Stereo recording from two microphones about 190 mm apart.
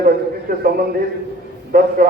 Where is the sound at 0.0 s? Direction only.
50° right (ahead or behind).